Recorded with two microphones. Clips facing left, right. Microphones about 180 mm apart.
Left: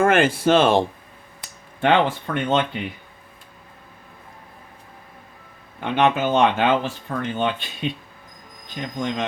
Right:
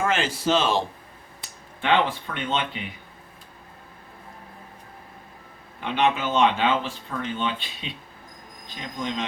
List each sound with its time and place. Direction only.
0.0 s speech: 55° left (ahead or behind)
5.8 s speech: 55° left (ahead or behind)